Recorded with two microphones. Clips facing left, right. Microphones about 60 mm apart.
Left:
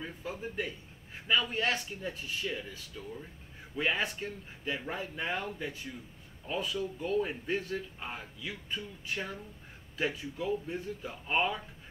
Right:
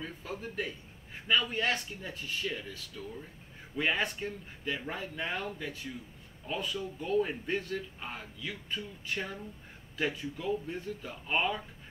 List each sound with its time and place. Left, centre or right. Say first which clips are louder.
0.0 s speech: left 1 dB; centre
1.5 s speech: even; centre